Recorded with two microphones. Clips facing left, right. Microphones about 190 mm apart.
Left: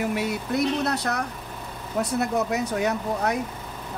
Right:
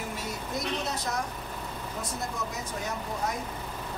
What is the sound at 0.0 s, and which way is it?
Speech, 70° left (ahead or behind).